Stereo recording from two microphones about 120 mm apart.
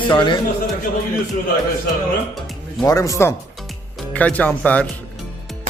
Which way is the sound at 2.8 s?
30° left (ahead or behind).